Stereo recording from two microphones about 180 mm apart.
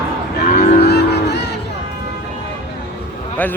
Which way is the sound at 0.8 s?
65° left (ahead or behind).